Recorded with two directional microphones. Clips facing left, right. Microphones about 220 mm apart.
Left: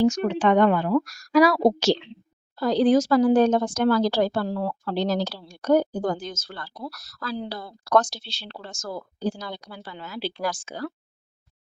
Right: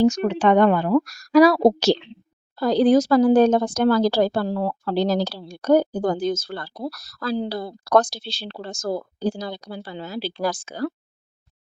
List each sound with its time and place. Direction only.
0.0 s a woman's voice: 40° right (ahead or behind)